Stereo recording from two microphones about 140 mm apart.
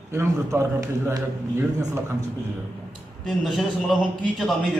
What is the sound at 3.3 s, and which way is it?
A man's voice, centre (ahead or behind).